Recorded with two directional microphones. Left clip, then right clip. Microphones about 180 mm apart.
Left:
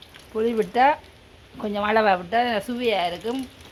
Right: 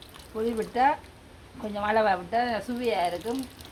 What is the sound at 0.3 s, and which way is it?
Speech, 50° left (ahead or behind).